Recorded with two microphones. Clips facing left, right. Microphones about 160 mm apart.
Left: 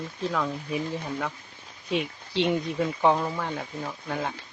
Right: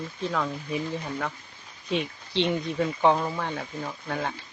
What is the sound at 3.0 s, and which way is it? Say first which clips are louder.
Speech: right 1 dB; centre (ahead or behind).